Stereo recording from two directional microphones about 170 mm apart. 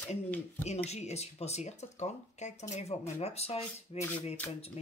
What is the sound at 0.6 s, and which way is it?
Speech, 40° left (ahead or behind).